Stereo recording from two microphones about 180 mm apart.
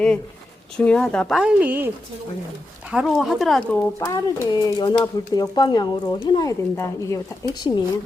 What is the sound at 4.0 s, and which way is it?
A woman's voice, 15° left (ahead or behind).